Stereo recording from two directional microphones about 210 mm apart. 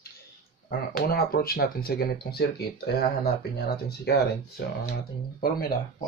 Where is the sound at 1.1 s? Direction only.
45° left (ahead or behind).